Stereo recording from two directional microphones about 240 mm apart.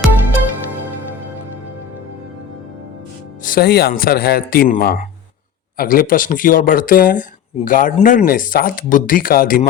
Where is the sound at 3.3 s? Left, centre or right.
Left.